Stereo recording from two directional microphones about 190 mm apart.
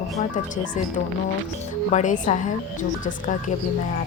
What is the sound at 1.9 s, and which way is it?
Speech, 40° left (ahead or behind).